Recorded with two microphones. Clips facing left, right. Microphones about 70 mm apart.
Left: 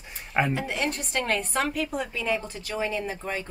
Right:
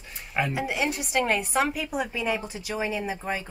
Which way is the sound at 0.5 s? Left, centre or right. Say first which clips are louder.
Right 1 dB; centre.